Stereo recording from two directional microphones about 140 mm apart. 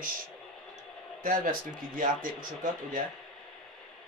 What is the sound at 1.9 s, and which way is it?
Speech, 75° right (ahead or behind).